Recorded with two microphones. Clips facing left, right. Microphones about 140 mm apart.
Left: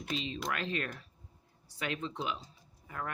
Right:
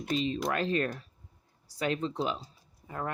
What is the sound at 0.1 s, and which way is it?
Speech, 40° right (ahead or behind).